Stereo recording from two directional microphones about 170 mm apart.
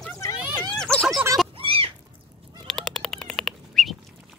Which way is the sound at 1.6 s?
35° right (ahead or behind).